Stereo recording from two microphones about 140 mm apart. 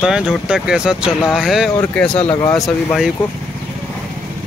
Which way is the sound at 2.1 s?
45° left (ahead or behind).